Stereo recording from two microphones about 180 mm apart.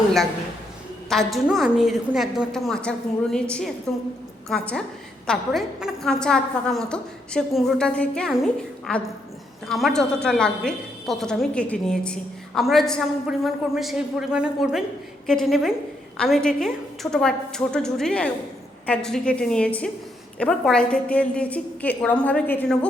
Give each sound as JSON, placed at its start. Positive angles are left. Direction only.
{"t": 1.1, "sound": "a woman's voice", "side_deg": 0}